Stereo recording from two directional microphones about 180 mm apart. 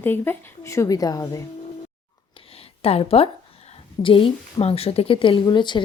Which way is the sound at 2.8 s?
35° left (ahead or behind).